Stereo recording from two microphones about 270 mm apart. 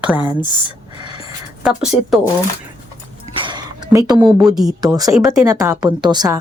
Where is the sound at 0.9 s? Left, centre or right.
Centre.